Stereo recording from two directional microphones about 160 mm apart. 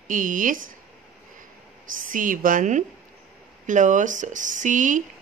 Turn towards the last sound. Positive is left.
turn(degrees=-55)  # may be behind; listen again after turning